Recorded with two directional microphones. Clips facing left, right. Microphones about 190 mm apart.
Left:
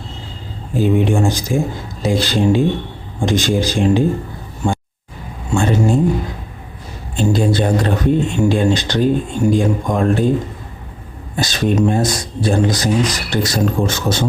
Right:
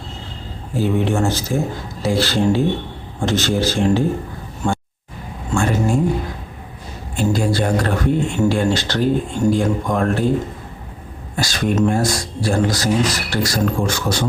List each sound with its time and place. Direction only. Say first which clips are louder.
0.7 s a man's voice: left 3 dB; 15° left (ahead or behind)
5.5 s a sound: left 3 dB; 20° left (ahead or behind)
7.2 s a man's voice: left 3 dB; 20° left (ahead or behind)
11.3 s speech: left 2 dB; 20° left (ahead or behind)